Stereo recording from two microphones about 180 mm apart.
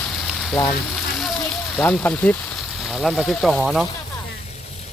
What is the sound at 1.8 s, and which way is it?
Speech, 10° left (ahead or behind).